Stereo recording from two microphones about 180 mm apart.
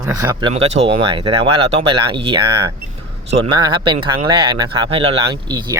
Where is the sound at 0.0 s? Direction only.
20° right (ahead or behind).